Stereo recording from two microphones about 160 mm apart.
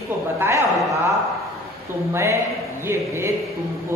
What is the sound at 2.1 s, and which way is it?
Speech, 20° right (ahead or behind).